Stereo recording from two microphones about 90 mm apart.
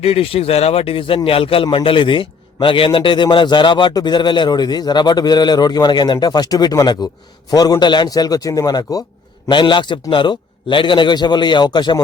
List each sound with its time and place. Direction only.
0.0 s speech: 90° left
1.6 s a man's voice: 70° left (ahead or behind); by 9.0 s 50° left (ahead or behind)
9.5 s a man's voice: 65° left (ahead or behind)